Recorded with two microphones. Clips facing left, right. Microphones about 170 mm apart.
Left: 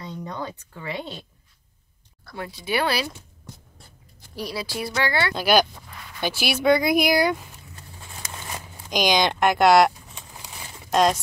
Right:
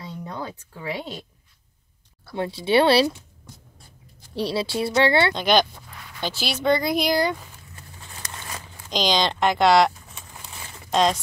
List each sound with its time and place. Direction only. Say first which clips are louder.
0.0 s a sound: left 1 dB; 5° right (ahead or behind)
2.3 s speech: right 7 dB; 30° right (ahead or behind)
4.4 s speech: right 5 dB; 30° right (ahead or behind)
5.3 s speech: even; 10° left (ahead or behind)
8.2 s a sound: left 1 dB; 10° left (ahead or behind)
9.4 s speech: left 1 dB; 10° left (ahead or behind)
10.4 s crumpling: even; 10° left (ahead or behind)